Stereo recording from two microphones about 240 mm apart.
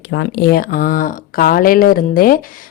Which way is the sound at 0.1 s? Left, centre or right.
Left.